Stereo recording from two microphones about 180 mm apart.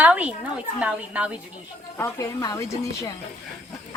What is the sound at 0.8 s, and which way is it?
Speech, 5° right (ahead or behind).